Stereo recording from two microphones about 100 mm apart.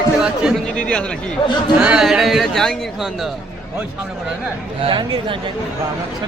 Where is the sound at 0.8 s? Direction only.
10° left (ahead or behind).